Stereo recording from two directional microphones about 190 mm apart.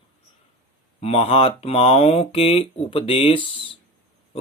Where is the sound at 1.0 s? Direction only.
30° left (ahead or behind).